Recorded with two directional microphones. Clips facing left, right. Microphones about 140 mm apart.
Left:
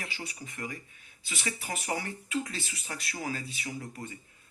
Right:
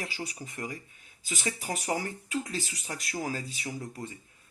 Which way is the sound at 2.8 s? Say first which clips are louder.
Right 1 dB; 40° right (ahead or behind).